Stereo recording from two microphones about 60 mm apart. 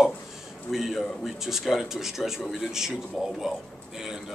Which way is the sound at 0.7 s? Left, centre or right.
Centre.